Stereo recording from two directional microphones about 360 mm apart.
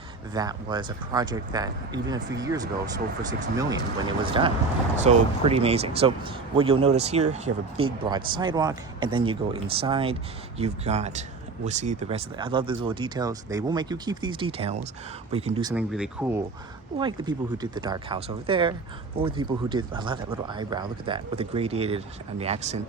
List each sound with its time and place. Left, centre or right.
0.3 s speech: centre
15.7 s speech: centre